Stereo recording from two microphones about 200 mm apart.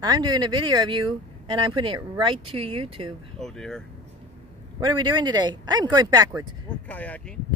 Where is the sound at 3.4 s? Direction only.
5° left (ahead or behind).